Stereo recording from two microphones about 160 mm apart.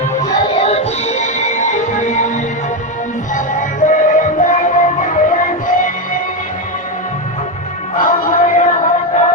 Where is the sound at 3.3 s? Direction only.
55° left (ahead or behind).